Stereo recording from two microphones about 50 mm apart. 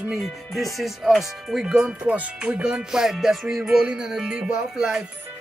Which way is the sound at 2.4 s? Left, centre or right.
Centre.